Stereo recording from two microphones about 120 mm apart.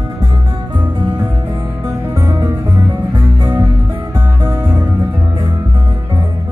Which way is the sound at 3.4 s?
30° right (ahead or behind).